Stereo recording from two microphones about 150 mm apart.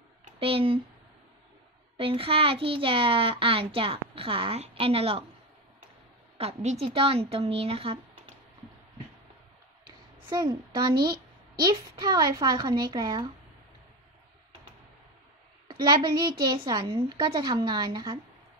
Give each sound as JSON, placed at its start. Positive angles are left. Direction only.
{"t": 0.4, "sound": "a child's voice", "side_deg": -40}
{"t": 2.0, "sound": "a child's voice", "side_deg": -35}
{"t": 6.3, "sound": "a child's voice", "side_deg": -45}
{"t": 9.8, "sound": "a sound", "side_deg": -25}
{"t": 11.0, "sound": "a sound", "side_deg": -90}
{"t": 11.6, "sound": "speech", "side_deg": -30}
{"t": 15.7, "sound": "a child's voice", "side_deg": -30}